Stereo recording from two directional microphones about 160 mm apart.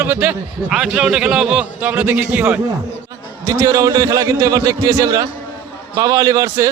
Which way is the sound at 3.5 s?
20° right (ahead or behind).